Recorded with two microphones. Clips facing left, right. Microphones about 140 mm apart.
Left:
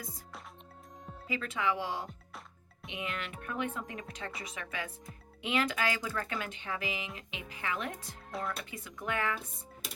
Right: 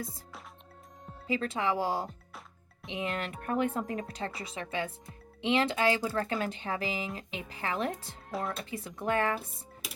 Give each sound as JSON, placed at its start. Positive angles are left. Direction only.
{"t": 1.3, "sound": "speech", "side_deg": -35}
{"t": 8.3, "sound": "speech", "side_deg": 0}
{"t": 8.5, "sound": "speech", "side_deg": -30}